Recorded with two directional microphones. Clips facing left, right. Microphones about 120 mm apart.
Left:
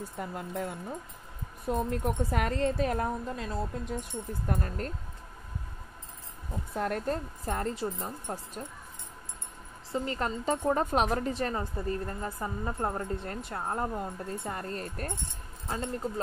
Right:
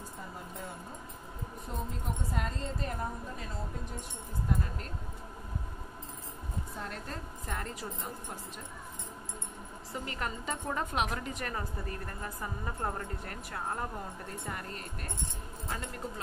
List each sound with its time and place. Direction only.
0.2 s speech: 90° left
1.7 s speech: 70° left (ahead or behind); by 3.4 s 90° left
4.5 s speech: 55° left (ahead or behind)
6.7 s speech: 70° left (ahead or behind)
7.1 s a woman's voice: 35° left (ahead or behind)
9.9 s a woman's voice: 30° left (ahead or behind)